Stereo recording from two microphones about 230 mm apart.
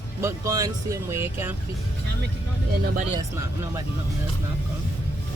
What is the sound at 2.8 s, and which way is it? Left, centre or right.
Speech, right.